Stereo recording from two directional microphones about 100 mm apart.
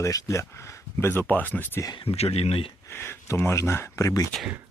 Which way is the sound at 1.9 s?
80° left.